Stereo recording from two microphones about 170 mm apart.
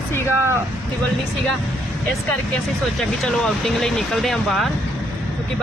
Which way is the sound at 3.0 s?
Centre (ahead or behind).